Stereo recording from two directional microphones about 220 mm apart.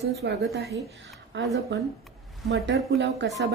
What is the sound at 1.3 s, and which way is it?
A woman's voice, 55° right (ahead or behind).